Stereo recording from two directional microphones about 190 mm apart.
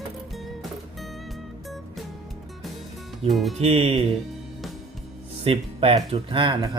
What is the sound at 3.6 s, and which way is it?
Music, 30° right (ahead or behind).